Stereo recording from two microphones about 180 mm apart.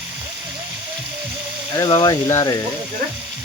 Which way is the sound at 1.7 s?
20° left (ahead or behind).